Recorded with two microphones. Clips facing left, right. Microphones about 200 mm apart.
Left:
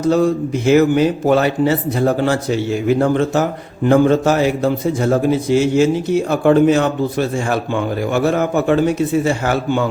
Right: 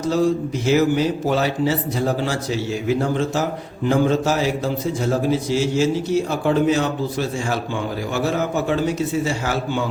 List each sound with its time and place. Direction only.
0.0 s a man's voice: 55° left (ahead or behind)